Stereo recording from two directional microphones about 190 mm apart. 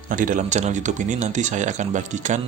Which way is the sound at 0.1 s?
45° right (ahead or behind).